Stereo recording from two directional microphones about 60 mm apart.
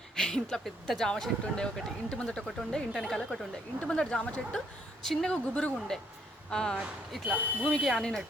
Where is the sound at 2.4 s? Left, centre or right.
Centre.